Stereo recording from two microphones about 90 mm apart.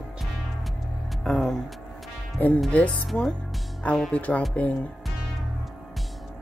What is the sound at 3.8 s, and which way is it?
Speech, 10° left (ahead or behind).